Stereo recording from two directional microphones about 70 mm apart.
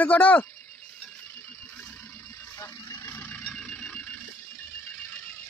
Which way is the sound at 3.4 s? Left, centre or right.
Centre.